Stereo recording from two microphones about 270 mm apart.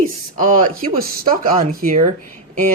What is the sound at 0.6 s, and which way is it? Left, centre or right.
Speech, right.